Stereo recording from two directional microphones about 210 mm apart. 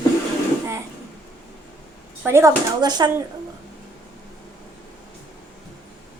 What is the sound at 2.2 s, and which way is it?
Speech, 10° right (ahead or behind).